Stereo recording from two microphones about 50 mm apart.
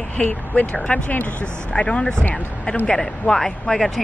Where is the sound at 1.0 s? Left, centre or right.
Left.